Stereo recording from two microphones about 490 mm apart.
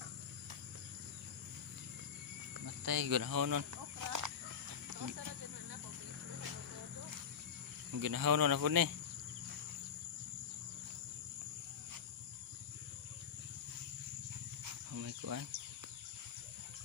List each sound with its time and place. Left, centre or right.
2.6 s speech: right
7.9 s speech: right
14.9 s cricket: right